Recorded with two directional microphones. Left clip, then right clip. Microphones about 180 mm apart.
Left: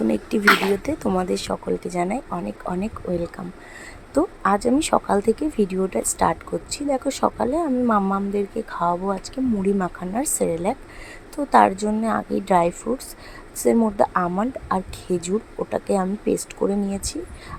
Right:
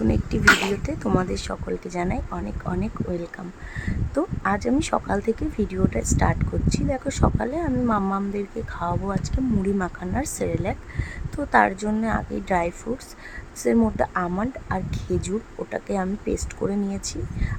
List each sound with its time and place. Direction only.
0.1 s speech: 15° left (ahead or behind)
13.9 s speech: 15° left (ahead or behind)